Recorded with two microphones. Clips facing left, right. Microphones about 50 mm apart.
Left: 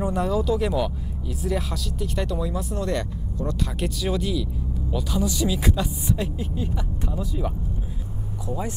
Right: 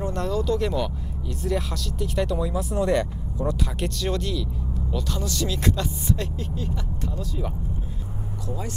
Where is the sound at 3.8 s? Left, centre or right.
Centre.